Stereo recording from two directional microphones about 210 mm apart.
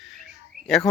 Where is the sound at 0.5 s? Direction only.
45° right (ahead or behind).